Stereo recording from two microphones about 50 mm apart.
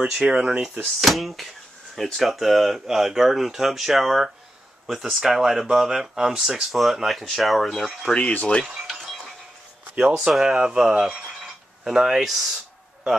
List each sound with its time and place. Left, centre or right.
0.2 s speech: centre
1.0 s speech: centre
8.1 s speech: left
8.6 s a sound: centre
9.9 s speech: centre